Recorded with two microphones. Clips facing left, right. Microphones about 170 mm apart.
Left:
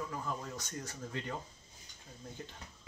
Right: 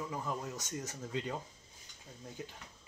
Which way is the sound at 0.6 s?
20° right (ahead or behind).